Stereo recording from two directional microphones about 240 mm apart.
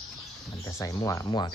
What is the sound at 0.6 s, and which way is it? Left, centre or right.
Speech, centre.